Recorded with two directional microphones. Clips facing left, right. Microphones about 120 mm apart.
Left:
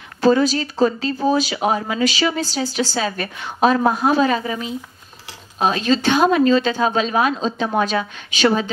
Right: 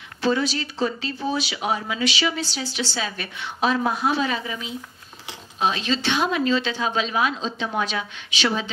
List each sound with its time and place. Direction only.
0.2 s speech: 40° left (ahead or behind)